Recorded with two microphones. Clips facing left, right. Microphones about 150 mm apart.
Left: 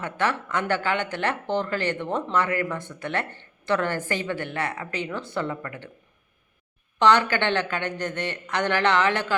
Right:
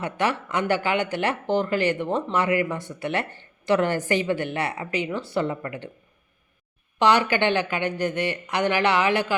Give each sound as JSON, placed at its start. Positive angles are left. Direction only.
{"t": 0.0, "sound": "speech", "side_deg": -15}
{"t": 7.0, "sound": "speech", "side_deg": -10}